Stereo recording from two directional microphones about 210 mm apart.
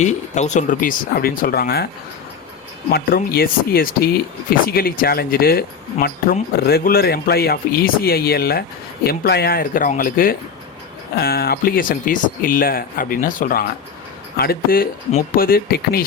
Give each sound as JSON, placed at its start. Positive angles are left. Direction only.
{"t": 0.0, "sound": "speech", "side_deg": 35}
{"t": 2.9, "sound": "speech", "side_deg": 45}